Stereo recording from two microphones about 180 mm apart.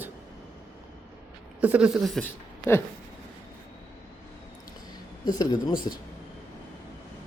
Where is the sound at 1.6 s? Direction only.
5° right (ahead or behind).